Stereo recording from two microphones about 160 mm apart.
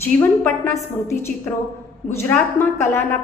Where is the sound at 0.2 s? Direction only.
15° left (ahead or behind).